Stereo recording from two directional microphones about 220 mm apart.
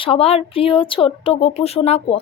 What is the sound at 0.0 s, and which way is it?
Speech, 25° left (ahead or behind).